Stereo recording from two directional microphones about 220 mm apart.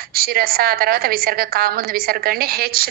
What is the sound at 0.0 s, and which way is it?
A woman's voice, 45° right (ahead or behind).